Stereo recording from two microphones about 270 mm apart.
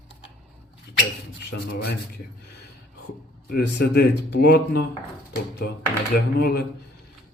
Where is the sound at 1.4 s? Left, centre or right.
Left.